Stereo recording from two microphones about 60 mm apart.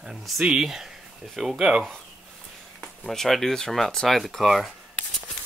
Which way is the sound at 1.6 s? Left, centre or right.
Centre.